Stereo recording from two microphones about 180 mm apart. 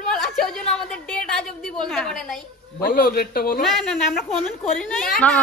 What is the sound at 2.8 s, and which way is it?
Speech, 55° left (ahead or behind).